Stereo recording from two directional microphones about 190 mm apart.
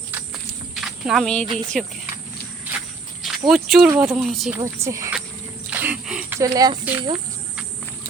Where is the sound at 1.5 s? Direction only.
Centre (ahead or behind).